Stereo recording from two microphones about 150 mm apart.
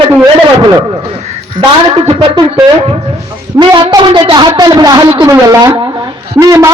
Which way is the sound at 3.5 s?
30° right (ahead or behind).